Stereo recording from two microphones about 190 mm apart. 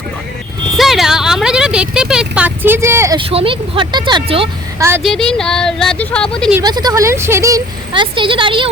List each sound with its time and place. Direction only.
0.8 s a sound: centre (ahead or behind)
3.2 s speech: 30° right (ahead or behind)
4.8 s a woman's voice: 10° right (ahead or behind)
5.0 s speech: centre (ahead or behind)
6.6 s speech: 20° right (ahead or behind)